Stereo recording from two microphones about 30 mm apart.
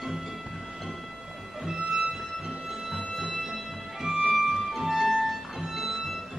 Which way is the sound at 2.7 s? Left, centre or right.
Centre.